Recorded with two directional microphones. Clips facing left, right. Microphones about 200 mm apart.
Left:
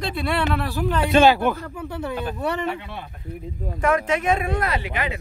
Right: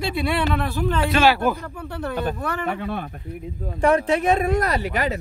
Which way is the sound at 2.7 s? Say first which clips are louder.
Right 4 dB; 50° right (ahead or behind).